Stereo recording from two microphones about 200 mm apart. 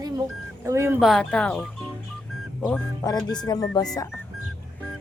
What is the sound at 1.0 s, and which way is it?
Speech, centre (ahead or behind).